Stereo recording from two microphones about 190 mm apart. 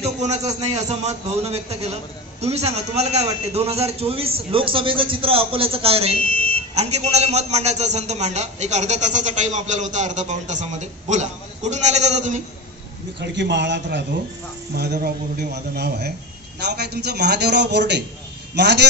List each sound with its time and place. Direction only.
0.0 s a man's voice: 35° right (ahead or behind)
6.1 s a sound: 50° left (ahead or behind)
6.7 s a man's voice: 35° right (ahead or behind)
13.2 s a man's voice: 65° right (ahead or behind)
14.8 s a man's voice: 55° right (ahead or behind)